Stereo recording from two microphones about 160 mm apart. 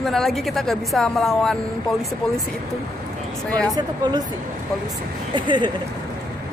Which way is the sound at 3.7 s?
25° right (ahead or behind).